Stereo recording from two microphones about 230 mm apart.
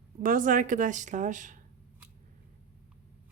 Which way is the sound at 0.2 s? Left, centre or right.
Right.